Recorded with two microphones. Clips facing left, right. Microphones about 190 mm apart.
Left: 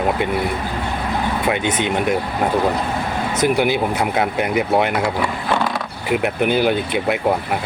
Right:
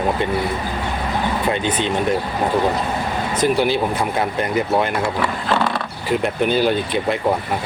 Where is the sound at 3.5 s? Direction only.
15° left (ahead or behind).